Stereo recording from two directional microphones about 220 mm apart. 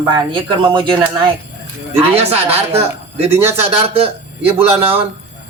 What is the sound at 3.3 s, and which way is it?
Speech, 10° right (ahead or behind).